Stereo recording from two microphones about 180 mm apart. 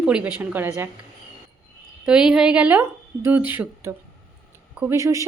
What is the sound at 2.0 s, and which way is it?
A woman's voice, 5° right (ahead or behind).